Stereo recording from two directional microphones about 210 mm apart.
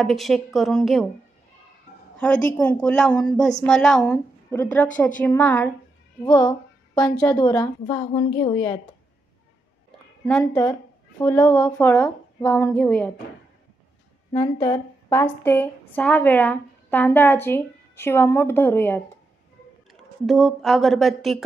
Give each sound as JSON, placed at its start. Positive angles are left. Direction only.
{"t": 0.0, "sound": "a woman's voice", "side_deg": 0}
{"t": 2.1, "sound": "a woman's voice", "side_deg": 5}
{"t": 6.2, "sound": "a woman's voice", "side_deg": 20}
{"t": 10.4, "sound": "speech", "side_deg": 15}
{"t": 14.3, "sound": "a woman's voice", "side_deg": 15}
{"t": 19.9, "sound": "a woman's voice", "side_deg": 0}